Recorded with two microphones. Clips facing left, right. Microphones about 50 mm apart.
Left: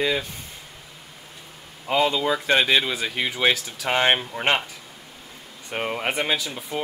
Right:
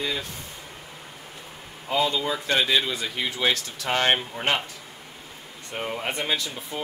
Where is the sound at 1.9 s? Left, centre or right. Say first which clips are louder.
Left 3 dB; left.